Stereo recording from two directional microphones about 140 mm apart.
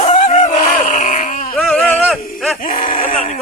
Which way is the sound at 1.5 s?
5° left (ahead or behind).